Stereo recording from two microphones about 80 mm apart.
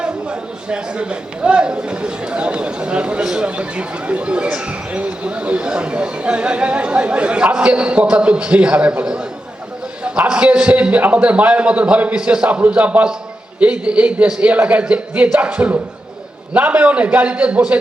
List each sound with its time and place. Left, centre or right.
0.0 s a man's voice: centre